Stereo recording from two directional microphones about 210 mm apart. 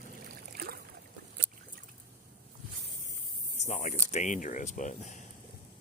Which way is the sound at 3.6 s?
35° left (ahead or behind).